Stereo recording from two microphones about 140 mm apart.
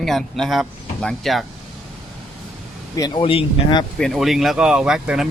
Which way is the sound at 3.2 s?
40° left (ahead or behind).